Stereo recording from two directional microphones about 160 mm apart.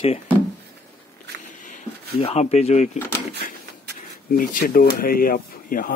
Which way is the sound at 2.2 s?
40° left (ahead or behind).